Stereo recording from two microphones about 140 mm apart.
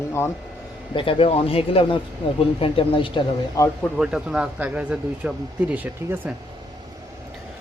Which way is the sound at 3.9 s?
5° right (ahead or behind).